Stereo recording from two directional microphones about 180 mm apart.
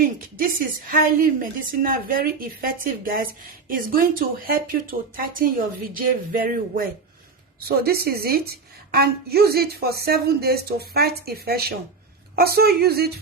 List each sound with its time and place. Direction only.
0.0 s a woman's voice: 50° right (ahead or behind)